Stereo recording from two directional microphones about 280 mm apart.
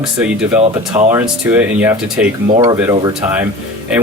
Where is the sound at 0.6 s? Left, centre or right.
Right.